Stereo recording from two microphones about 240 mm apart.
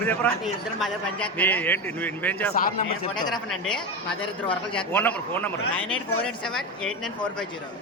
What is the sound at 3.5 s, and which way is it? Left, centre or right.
A man's voice, centre.